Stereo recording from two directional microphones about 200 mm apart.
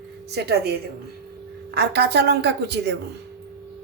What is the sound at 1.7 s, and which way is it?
Speech, 55° right (ahead or behind).